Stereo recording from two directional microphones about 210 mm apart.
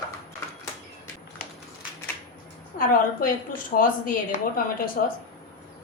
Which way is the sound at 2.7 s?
40° left (ahead or behind).